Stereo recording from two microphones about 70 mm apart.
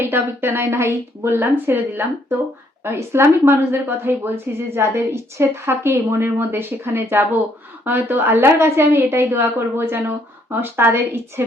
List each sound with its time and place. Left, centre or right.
0.0 s speech: right